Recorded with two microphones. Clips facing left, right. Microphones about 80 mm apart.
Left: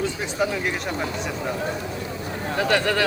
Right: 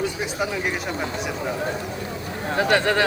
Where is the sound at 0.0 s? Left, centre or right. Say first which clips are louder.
Left 1 dB; centre.